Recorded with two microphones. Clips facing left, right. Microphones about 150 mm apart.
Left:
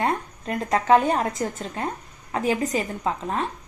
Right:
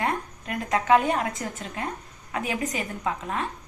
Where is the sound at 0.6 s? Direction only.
35° left (ahead or behind).